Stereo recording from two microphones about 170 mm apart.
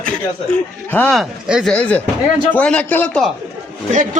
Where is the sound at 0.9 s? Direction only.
10° left (ahead or behind).